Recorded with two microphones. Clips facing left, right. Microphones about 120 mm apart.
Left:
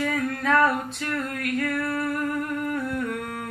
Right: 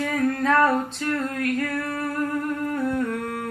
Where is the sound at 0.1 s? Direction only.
35° right (ahead or behind).